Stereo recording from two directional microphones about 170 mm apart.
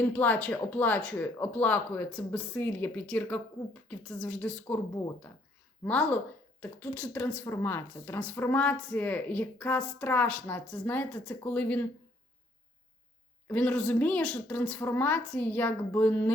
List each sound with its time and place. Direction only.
0.0 s a woman's voice: 10° left (ahead or behind)
5.8 s speech: 10° left (ahead or behind)
13.5 s speech: 10° left (ahead or behind)